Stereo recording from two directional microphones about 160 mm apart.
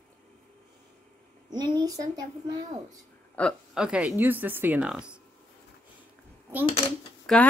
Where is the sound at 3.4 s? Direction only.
5° left (ahead or behind).